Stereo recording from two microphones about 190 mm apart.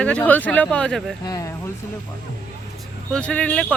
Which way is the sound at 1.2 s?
20° left (ahead or behind).